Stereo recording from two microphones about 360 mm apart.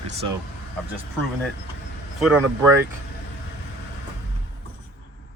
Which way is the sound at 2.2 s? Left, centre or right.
Centre.